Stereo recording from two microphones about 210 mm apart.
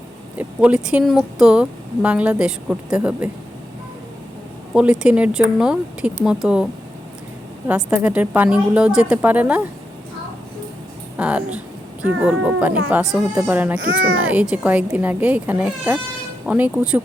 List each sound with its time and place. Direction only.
0.3 s speech: 5° right (ahead or behind)
4.7 s speech: 5° right (ahead or behind)
7.7 s speech: 5° right (ahead or behind)
11.2 s speech: 5° right (ahead or behind)
13.7 s a child's voice: 70° right (ahead or behind)
14.2 s speech: 5° right (ahead or behind)